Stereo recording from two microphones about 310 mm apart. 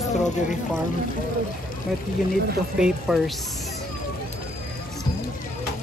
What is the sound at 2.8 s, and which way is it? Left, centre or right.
Speech, centre.